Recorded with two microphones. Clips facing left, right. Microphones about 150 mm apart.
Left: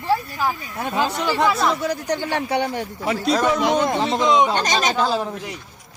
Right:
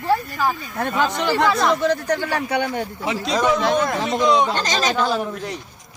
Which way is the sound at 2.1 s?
25° left (ahead or behind).